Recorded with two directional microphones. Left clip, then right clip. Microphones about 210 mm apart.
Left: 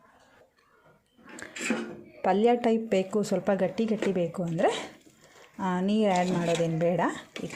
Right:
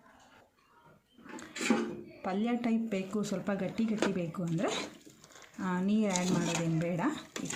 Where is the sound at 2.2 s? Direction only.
30° left (ahead or behind).